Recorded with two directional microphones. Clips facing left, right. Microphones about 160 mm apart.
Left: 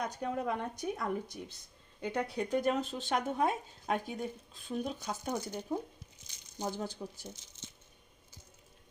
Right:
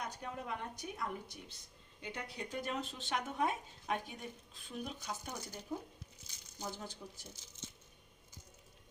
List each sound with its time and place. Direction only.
0.2 s speech: 45° left (ahead or behind)
5.3 s speech: 30° left (ahead or behind)